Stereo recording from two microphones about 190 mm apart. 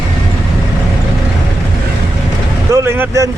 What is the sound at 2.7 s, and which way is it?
Vehicle, 15° right (ahead or behind).